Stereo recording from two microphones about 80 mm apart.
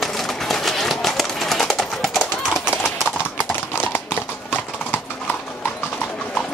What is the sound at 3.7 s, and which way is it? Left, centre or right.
Clip-clop, left.